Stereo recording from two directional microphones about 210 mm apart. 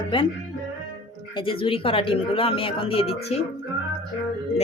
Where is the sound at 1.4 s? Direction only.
25° left (ahead or behind).